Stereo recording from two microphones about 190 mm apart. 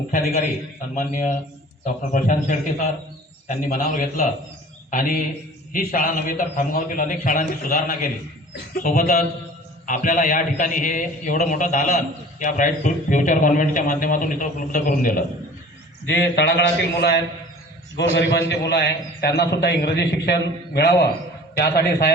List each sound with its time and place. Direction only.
0.9 s a man's voice: 40° left (ahead or behind)
16.0 s a man's voice: 65° left (ahead or behind)